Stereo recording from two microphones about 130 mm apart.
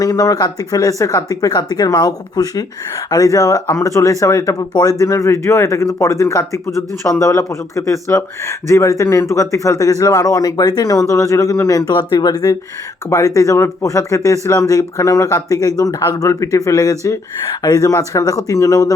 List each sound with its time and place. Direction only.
0.0 s speech: 25° left (ahead or behind)